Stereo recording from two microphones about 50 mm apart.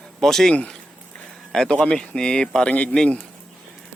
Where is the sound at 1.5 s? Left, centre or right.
Centre.